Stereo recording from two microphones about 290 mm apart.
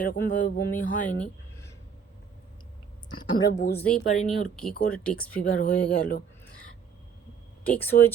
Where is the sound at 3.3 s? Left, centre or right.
Centre.